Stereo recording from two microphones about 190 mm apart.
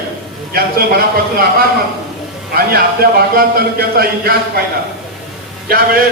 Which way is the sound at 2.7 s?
55° right (ahead or behind).